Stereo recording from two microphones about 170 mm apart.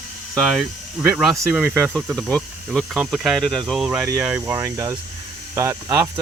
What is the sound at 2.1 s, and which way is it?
Speech, 5° left (ahead or behind).